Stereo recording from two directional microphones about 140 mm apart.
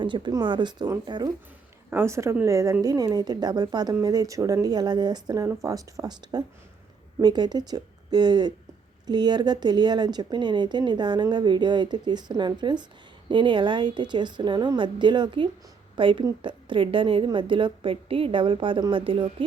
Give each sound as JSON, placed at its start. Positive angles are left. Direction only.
{"t": 0.0, "sound": "a woman's voice", "side_deg": -30}
{"t": 1.9, "sound": "a woman's voice", "side_deg": -20}